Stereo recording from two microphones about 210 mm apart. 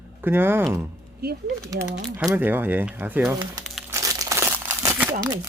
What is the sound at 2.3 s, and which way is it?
Speech, 10° right (ahead or behind).